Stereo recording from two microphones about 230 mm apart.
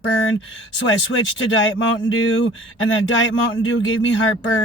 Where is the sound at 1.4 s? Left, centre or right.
Left.